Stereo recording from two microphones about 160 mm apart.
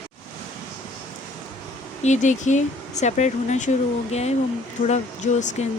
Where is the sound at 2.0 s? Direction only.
50° left (ahead or behind).